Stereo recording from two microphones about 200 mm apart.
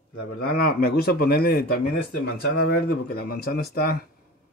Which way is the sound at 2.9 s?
50° left (ahead or behind).